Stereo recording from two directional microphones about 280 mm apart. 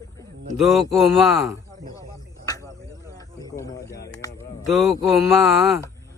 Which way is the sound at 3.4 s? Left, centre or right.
Centre.